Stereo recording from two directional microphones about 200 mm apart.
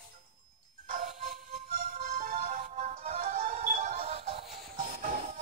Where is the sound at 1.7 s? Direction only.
40° right (ahead or behind).